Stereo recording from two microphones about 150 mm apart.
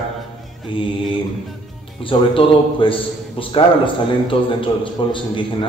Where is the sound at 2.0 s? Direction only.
35° left (ahead or behind).